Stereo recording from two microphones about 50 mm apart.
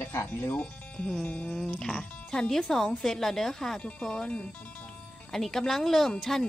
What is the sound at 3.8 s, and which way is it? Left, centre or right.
Speech, left.